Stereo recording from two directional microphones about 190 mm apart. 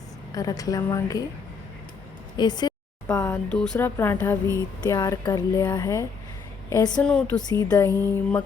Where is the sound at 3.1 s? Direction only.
10° left (ahead or behind).